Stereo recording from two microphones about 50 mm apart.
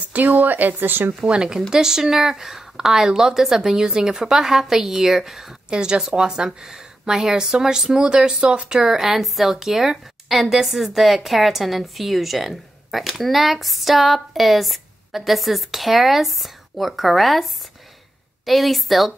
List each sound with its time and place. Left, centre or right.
0.1 s speech: right
1.2 s a woman's voice: centre